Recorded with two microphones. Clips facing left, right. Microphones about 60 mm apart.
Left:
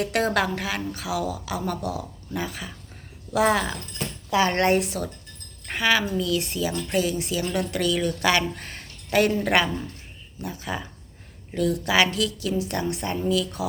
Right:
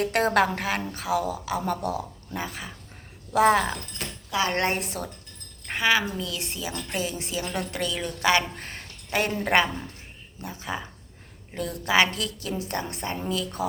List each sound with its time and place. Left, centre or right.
0.0 s a woman's voice: right
4.3 s speech: centre
4.5 s a woman's voice: right
5.7 s a woman's voice: right